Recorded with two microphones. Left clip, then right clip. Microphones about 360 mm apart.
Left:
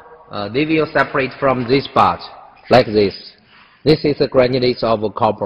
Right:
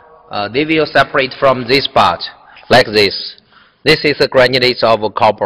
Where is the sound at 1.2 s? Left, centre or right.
Right.